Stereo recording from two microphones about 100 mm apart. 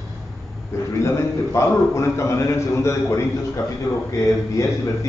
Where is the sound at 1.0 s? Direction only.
30° left (ahead or behind).